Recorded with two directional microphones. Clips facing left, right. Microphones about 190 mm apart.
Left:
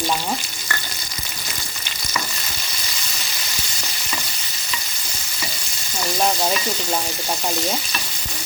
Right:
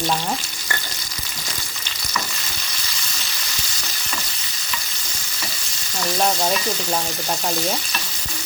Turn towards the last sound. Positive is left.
turn(degrees=5)  # may be behind; listen again after turning